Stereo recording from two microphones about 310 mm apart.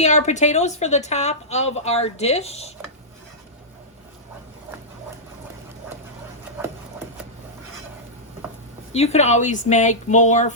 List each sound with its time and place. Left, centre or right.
0.0 s a woman's voice: left
8.9 s a woman's voice: left